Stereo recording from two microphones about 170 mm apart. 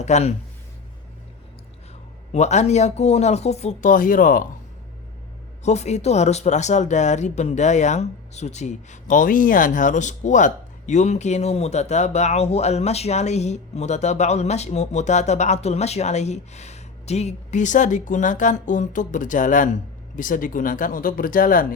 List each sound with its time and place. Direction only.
0.0 s speech: 40° left (ahead or behind)
2.3 s speech: 40° left (ahead or behind)
5.6 s speech: 40° left (ahead or behind)